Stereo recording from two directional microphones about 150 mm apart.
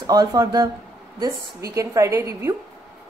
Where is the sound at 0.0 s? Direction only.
25° right (ahead or behind).